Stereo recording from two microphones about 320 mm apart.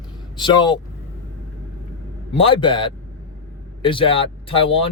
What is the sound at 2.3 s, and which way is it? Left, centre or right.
Speech, centre.